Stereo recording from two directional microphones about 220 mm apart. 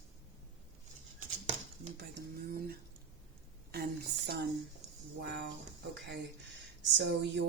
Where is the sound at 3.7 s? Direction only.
45° right (ahead or behind).